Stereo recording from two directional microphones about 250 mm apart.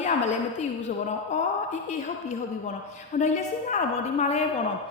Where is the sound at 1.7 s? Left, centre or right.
Left.